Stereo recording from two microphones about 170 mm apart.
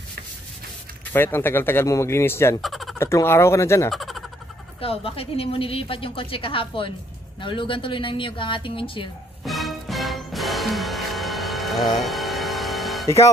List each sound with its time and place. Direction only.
1.1 s speech: 15° left (ahead or behind)
2.6 s frog: centre (ahead or behind)
3.0 s speech: 15° left (ahead or behind)
3.9 s a sound: centre (ahead or behind)
4.7 s a woman's voice: 35° left (ahead or behind)
9.4 s music: centre (ahead or behind)